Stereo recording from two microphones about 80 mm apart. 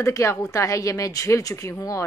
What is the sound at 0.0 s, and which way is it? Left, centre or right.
A woman's voice, left.